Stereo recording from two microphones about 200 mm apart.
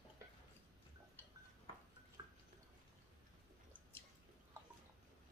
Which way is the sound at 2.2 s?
20° right (ahead or behind).